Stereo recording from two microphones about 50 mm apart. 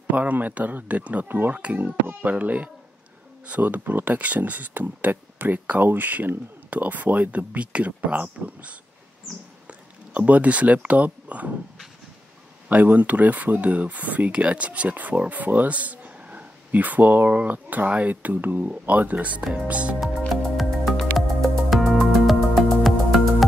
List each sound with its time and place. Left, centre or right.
0.1 s speech: right
12.6 s speech: right
20.2 s music: centre